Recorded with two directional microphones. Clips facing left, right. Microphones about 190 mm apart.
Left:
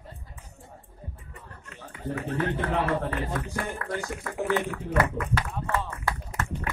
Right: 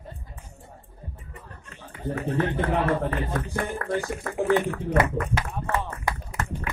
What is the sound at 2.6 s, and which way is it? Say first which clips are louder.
A man's voice: right 3 dB; 35° right (ahead or behind).